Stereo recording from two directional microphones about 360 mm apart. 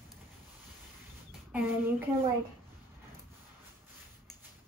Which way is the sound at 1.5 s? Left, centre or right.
Centre.